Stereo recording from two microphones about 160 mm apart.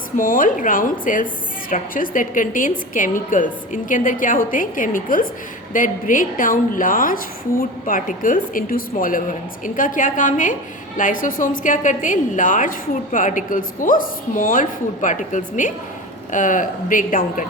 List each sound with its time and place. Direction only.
0.2 s a woman's voice: 60° left (ahead or behind)